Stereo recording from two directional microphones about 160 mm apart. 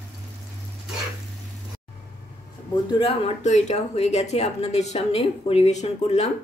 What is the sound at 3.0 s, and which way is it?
Speech, 40° left (ahead or behind).